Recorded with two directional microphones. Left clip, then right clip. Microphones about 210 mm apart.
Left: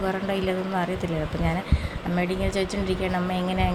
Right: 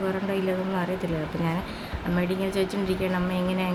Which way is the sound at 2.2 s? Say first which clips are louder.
Left 1 dB; 10° left (ahead or behind).